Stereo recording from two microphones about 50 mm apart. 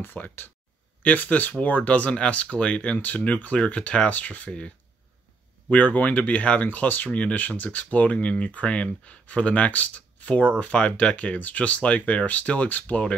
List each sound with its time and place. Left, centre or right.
0.0 s speech: left